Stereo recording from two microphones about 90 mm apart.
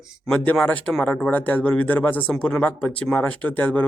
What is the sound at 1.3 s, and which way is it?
Speech, 20° left (ahead or behind).